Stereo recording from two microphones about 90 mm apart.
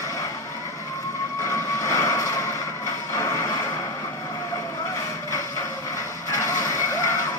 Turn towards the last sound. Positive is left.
turn(degrees=35)  # may be behind; listen again after turning